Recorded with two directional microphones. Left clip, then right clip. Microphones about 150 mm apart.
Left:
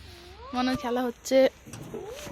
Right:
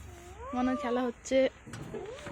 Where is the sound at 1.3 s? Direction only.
45° left (ahead or behind).